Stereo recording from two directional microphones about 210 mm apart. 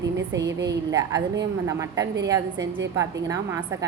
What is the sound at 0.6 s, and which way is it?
A woman's voice, 15° right (ahead or behind).